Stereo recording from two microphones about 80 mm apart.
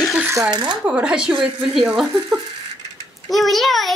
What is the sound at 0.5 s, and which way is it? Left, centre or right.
Speech, right.